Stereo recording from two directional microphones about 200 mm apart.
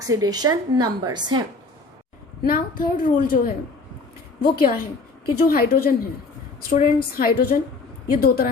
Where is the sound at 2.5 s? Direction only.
45° left (ahead or behind).